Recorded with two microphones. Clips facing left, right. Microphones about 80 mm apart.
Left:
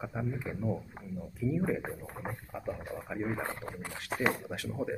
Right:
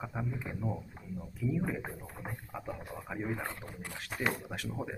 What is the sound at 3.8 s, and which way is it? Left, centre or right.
Speech, centre.